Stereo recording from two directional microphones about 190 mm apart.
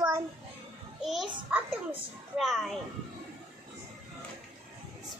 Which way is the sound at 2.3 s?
Centre (ahead or behind).